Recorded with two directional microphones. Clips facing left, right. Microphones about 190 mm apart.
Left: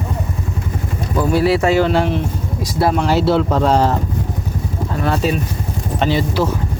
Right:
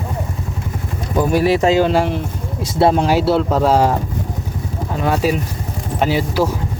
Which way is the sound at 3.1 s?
5° right (ahead or behind).